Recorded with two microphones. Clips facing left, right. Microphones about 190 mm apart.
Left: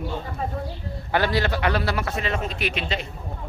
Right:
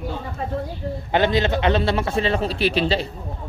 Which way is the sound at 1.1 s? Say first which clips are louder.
Right 3 dB; 20° right (ahead or behind).